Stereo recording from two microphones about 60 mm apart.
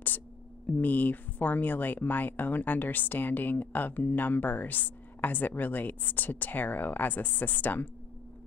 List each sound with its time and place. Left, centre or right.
0.7 s speech: left